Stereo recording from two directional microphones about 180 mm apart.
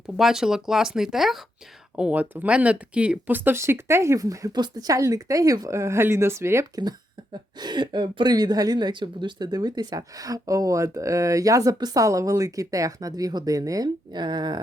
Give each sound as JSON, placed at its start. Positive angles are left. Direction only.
{"t": 0.2, "sound": "speech", "side_deg": 0}